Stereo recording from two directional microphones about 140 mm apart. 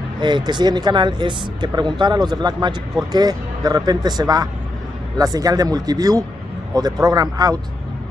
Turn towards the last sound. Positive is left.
turn(degrees=-25)  # may be behind; listen again after turning